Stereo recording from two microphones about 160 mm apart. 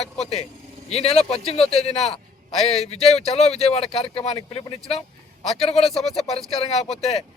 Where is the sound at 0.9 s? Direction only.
40° left (ahead or behind).